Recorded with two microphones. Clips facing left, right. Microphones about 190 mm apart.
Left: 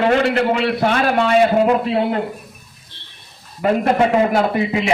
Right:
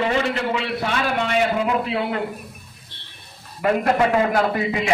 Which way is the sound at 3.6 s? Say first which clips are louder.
Left 3 dB; 25° left (ahead or behind).